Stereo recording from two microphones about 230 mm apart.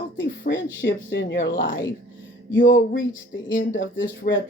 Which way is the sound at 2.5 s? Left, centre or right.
Left.